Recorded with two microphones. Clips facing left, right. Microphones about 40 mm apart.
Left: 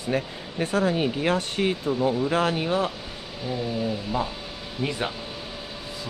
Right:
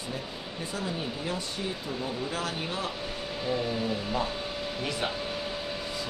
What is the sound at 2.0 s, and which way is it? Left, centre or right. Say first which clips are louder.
Speech: left 10 dB; left.